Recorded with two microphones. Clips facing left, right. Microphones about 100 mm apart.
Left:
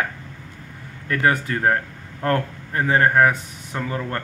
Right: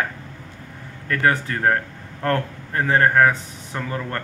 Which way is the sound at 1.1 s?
20° left (ahead or behind).